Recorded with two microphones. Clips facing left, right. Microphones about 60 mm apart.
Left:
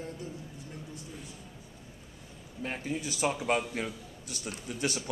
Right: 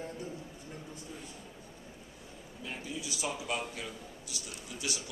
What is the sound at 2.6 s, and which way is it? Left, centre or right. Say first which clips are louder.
A man's voice: left 6 dB; left.